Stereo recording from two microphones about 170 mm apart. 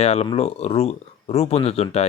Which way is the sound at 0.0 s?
40° left (ahead or behind).